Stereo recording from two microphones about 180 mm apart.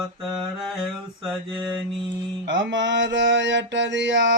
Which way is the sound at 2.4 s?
80° right.